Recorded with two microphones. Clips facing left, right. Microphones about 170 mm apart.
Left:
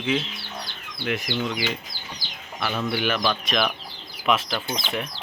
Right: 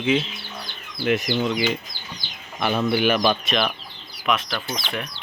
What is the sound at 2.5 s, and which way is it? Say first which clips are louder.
Speech: right 5 dB; 20° right (ahead or behind).